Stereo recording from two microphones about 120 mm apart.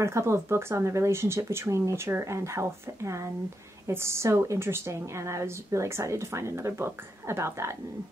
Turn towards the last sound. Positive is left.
turn(degrees=-25)  # may be behind; listen again after turning